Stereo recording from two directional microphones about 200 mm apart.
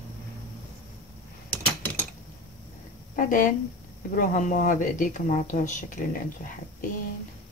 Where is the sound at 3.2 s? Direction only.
40° left (ahead or behind).